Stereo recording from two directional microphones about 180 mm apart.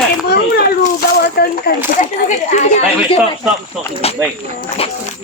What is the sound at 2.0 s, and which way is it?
Speech, 40° left (ahead or behind).